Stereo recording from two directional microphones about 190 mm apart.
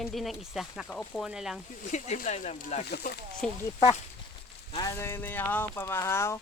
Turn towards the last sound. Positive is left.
turn(degrees=15)  # may be behind; listen again after turning